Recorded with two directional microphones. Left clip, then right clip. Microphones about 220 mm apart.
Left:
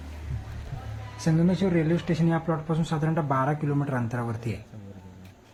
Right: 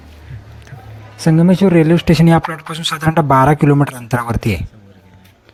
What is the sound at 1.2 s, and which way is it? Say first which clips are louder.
A man's voice: right 13 dB; 40° right (ahead or behind).